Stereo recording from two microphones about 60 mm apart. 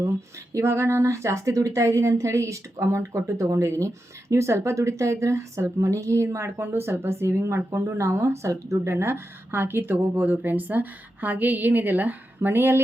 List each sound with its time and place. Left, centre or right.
0.5 s a woman's voice: right